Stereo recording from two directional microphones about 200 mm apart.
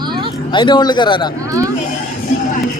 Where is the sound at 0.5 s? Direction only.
25° left (ahead or behind).